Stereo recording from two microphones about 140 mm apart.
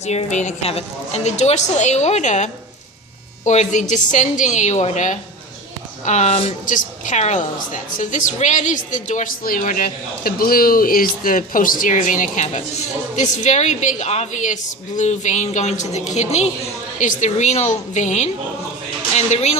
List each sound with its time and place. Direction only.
0.0 s a woman's voice: 50° left (ahead or behind)
6.7 s a woman's voice: 65° left (ahead or behind); by 19.5 s 50° left (ahead or behind)